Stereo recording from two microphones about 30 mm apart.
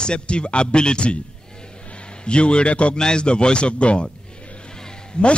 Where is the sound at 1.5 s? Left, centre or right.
Left.